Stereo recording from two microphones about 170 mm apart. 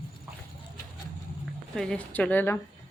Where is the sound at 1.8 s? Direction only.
5° left (ahead or behind).